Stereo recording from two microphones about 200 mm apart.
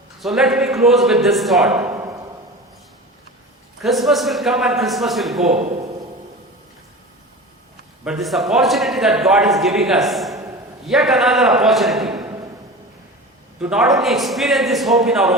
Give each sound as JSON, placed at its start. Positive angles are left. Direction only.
{"t": 0.2, "sound": "a man's voice", "side_deg": 0}
{"t": 3.8, "sound": "a man's voice", "side_deg": 0}
{"t": 5.5, "sound": "a man's voice", "side_deg": -35}
{"t": 8.0, "sound": "a man's voice", "side_deg": 0}
{"t": 13.6, "sound": "a man's voice", "side_deg": -5}